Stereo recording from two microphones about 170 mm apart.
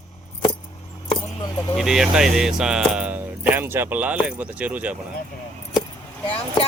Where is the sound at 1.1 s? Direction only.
20° left (ahead or behind).